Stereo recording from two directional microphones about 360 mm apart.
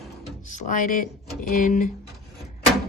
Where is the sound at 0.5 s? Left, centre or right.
Left.